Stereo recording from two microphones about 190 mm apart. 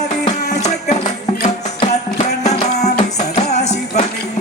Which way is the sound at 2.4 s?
35° left (ahead or behind).